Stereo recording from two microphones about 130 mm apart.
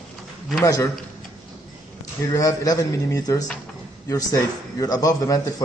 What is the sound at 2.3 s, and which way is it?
A man's voice, 25° left (ahead or behind).